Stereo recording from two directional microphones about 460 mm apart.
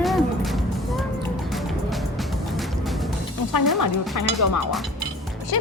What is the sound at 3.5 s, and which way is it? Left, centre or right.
Speech, left.